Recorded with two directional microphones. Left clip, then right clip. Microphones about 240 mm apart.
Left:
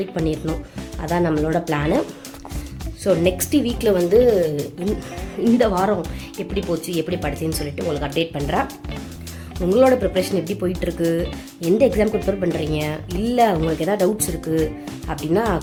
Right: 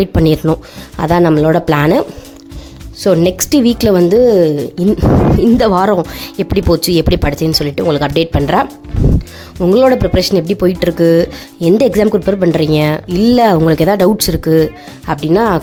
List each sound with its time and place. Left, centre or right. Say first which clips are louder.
0.0 s speech: right 11 dB; right
5.4 s speech: right 3 dB; right
9.6 s speech: right 6 dB; right